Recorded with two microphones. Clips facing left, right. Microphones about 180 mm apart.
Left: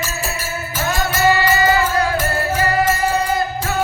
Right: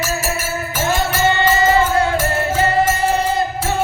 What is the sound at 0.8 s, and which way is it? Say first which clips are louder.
Music: right 1 dB; 25° right (ahead or behind).